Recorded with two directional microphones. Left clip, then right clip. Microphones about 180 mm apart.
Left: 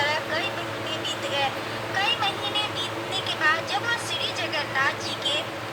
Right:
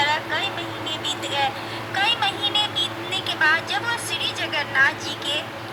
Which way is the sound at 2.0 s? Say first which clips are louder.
Right 3 dB; 5° right (ahead or behind).